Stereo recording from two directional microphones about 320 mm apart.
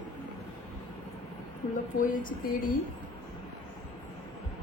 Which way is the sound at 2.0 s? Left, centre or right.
Left.